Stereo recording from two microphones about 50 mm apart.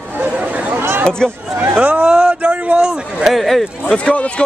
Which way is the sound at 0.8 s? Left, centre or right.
Right.